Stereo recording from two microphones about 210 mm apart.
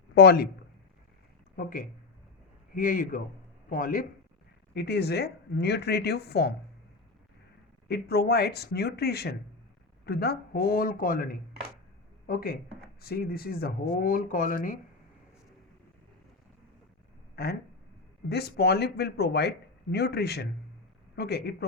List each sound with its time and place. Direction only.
0.1 s speech: 50° left (ahead or behind)
1.5 s speech: 40° left (ahead or behind)
4.7 s speech: 50° left (ahead or behind)
7.9 s speech: 50° left (ahead or behind)
17.3 s speech: 50° left (ahead or behind)